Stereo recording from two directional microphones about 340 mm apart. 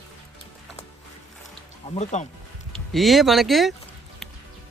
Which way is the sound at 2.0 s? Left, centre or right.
Centre.